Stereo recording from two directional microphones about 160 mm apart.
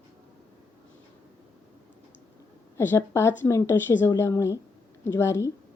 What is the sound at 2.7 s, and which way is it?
A woman's voice, 15° left (ahead or behind).